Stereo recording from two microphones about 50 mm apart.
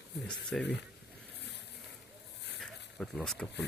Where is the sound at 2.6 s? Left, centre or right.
Centre.